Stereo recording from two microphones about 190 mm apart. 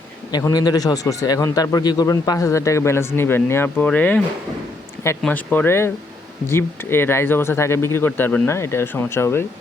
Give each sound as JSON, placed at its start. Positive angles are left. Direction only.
{"t": 0.3, "sound": "a man's voice", "side_deg": 20}
{"t": 5.2, "sound": "a man's voice", "side_deg": 10}